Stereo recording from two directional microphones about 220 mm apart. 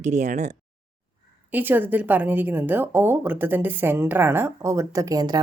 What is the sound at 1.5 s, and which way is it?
A woman's voice, 10° right (ahead or behind).